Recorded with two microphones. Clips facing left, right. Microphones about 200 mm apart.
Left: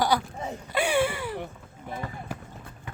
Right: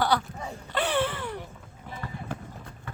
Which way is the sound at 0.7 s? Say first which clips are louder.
Left 2 dB; 10° left (ahead or behind).